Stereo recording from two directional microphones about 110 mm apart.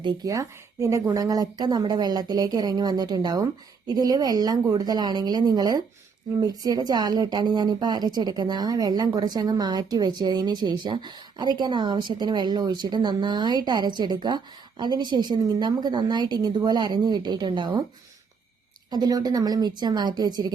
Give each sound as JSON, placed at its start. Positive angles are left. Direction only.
{"t": 0.3, "sound": "speech", "side_deg": -30}
{"t": 18.9, "sound": "speech", "side_deg": -40}